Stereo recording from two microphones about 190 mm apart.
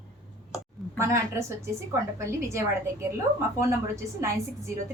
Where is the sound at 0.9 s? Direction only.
15° right (ahead or behind).